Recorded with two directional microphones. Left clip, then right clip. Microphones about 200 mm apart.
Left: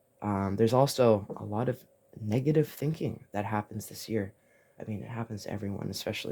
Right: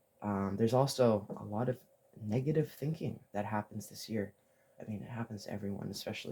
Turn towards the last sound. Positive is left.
turn(degrees=55)  # may be behind; listen again after turning